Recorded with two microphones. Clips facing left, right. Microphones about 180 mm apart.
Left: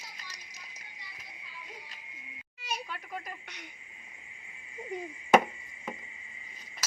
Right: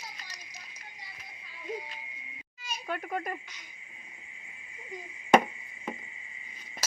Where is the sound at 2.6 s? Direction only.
70° left (ahead or behind).